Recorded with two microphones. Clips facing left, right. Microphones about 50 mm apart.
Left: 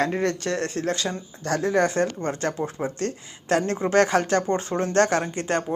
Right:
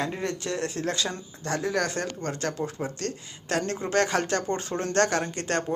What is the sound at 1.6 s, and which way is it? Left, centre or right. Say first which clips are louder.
Speech: left 7 dB; left.